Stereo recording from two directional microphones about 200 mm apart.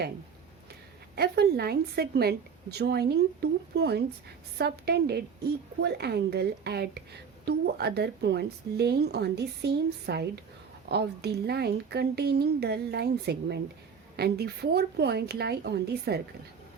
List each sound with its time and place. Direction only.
1.1 s a woman's voice: 55° right (ahead or behind)